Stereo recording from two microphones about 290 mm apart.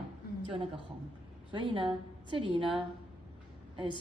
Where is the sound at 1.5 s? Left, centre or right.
Centre.